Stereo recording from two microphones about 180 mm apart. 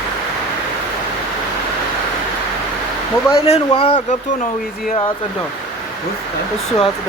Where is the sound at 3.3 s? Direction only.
30° left (ahead or behind).